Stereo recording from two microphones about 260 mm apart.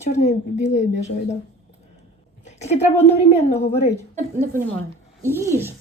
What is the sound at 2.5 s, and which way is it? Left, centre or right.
A woman's voice, left.